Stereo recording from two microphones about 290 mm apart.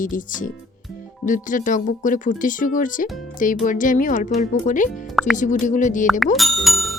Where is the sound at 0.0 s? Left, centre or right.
Left.